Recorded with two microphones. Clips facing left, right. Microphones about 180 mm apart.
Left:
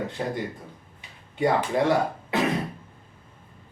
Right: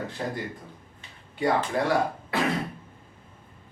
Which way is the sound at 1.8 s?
20° left (ahead or behind).